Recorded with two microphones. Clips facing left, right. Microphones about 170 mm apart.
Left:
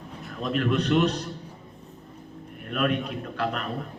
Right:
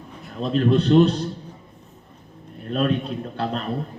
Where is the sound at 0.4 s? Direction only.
30° right (ahead or behind).